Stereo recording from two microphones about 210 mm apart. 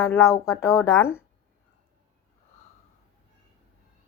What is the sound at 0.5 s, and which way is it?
Speech, 15° left (ahead or behind).